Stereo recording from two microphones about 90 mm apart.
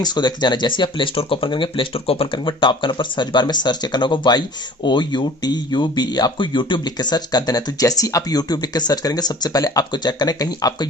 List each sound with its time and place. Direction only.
0.0 s speech: 50° left (ahead or behind)